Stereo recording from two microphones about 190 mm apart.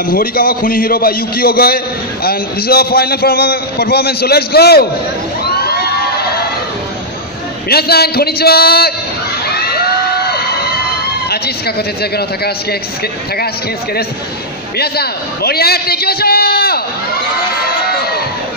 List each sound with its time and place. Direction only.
0.0 s a man's voice: 50° left (ahead or behind)
5.4 s crowd: 55° left (ahead or behind)
7.7 s a man's voice: 55° left (ahead or behind)
9.5 s a sound: 55° left (ahead or behind)
11.2 s a man's voice: 55° left (ahead or behind)
14.8 s a man's voice: 55° left (ahead or behind)
17.8 s crowd: 55° left (ahead or behind)